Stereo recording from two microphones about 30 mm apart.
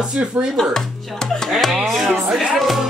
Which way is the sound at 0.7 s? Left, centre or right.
Centre.